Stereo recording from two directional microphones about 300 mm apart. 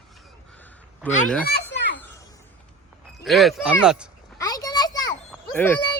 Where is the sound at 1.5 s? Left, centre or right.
Left.